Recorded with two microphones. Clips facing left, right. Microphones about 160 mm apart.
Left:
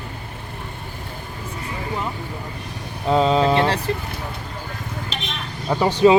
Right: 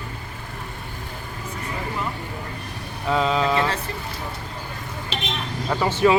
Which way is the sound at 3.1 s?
35° left (ahead or behind).